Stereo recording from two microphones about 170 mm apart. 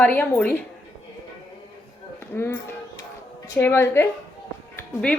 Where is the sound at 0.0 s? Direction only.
10° left (ahead or behind).